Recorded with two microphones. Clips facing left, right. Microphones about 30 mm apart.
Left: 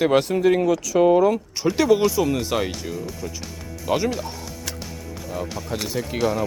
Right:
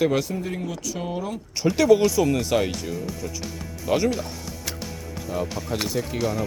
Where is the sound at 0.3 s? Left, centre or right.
Left.